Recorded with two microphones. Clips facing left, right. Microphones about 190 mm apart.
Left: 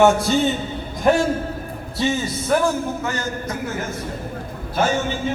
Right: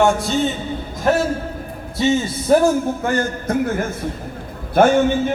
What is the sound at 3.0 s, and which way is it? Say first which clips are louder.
Speech: right 5 dB; 55° right (ahead or behind).